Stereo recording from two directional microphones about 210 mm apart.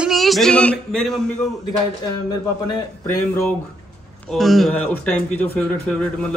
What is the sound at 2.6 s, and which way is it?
Speech, 20° left (ahead or behind).